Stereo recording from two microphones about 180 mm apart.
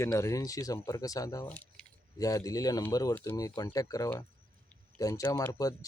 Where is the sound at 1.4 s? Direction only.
5° left (ahead or behind).